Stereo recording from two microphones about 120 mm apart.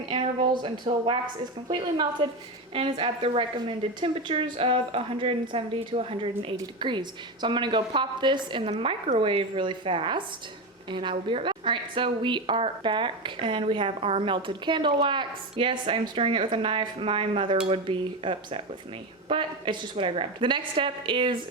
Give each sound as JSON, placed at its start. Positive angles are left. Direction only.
{"t": 0.0, "sound": "a sound", "side_deg": -40}
{"t": 0.9, "sound": "a woman's voice", "side_deg": -45}
{"t": 2.2, "sound": "a woman's voice", "side_deg": -45}